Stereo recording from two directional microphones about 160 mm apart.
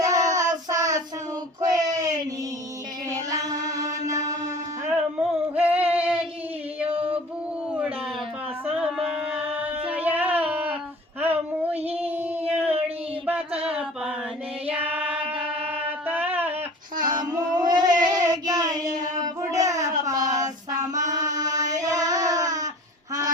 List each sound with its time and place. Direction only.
0.0 s child singing: 20° right (ahead or behind)
1.7 s a sound: 20° right (ahead or behind)
3.3 s mantra: 20° right (ahead or behind)
4.3 s music: 20° right (ahead or behind)
5.5 s female singing: 10° right (ahead or behind)
6.8 s a sound: 35° right (ahead or behind)
7.7 s a sound: 5° right (ahead or behind)
9.3 s music: 10° right (ahead or behind)
11.2 s child singing: 10° right (ahead or behind)
13.7 s mantra: 10° right (ahead or behind)
14.7 s child singing: 10° right (ahead or behind)
15.7 s a sound: 10° right (ahead or behind)
17.0 s child singing: 25° right (ahead or behind)
21.1 s singing: 25° right (ahead or behind)